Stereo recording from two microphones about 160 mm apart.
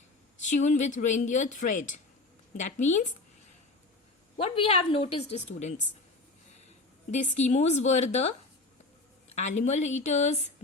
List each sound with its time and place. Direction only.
0.3 s speech: 50° left (ahead or behind)
4.4 s a woman's voice: 40° left (ahead or behind)
7.1 s speech: 45° left (ahead or behind)